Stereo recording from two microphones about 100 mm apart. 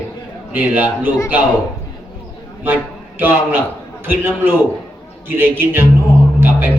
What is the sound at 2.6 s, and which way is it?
A man's voice, 20° right (ahead or behind).